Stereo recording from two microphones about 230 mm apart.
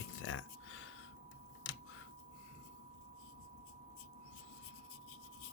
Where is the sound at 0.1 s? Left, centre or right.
Left.